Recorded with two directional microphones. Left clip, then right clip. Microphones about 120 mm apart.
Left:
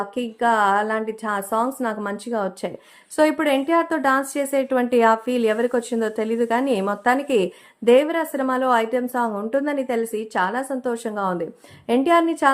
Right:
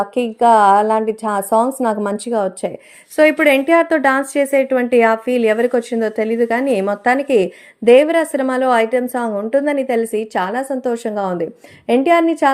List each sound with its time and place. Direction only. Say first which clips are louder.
0.1 s speech: right 9 dB; 40° right (ahead or behind)
3.3 s a woman's voice: right 7 dB; 15° right (ahead or behind)
4.5 s a woman's voice: right 5 dB; 5° left (ahead or behind)
7.9 s a woman's voice: right 6 dB; 20° right (ahead or behind)